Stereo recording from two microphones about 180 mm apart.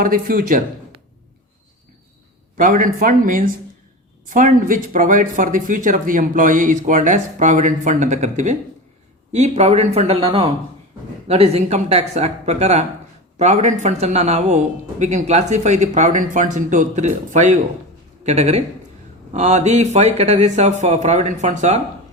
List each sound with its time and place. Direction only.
0.0 s speech: 50° right (ahead or behind)
2.6 s a man's voice: 45° right (ahead or behind)